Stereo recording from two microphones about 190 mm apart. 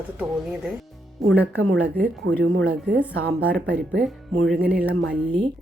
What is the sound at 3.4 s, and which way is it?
Speech, 90° right.